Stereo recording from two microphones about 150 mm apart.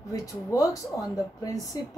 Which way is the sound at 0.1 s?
20° left (ahead or behind).